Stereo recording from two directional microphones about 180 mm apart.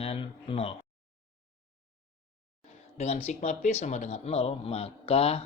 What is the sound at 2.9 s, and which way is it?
A man's voice, 35° left (ahead or behind).